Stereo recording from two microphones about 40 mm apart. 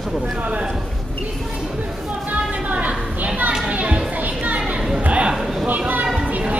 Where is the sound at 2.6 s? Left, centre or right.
Right.